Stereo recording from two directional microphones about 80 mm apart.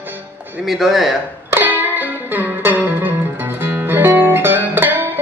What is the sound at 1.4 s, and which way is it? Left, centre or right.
Music, right.